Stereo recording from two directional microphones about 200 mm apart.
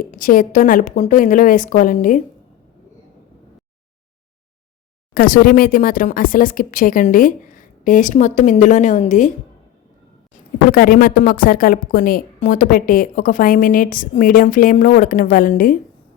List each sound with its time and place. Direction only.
0.1 s a woman's voice: 45° left (ahead or behind)
5.1 s a woman's voice: 45° left (ahead or behind)
10.7 s a woman's voice: 45° left (ahead or behind)